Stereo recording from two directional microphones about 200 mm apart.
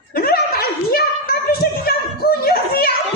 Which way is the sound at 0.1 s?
45° left (ahead or behind).